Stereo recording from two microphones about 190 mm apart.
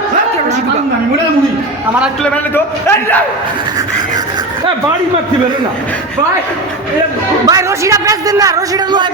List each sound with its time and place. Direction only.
2.8 s a man's voice: 10° left (ahead or behind)
7.4 s a man's voice: 15° right (ahead or behind)